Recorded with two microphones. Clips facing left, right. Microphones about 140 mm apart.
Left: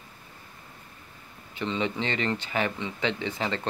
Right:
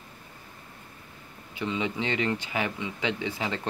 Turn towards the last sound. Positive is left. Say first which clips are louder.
# left 1 dB
turn(degrees=-10)  # may be behind; listen again after turning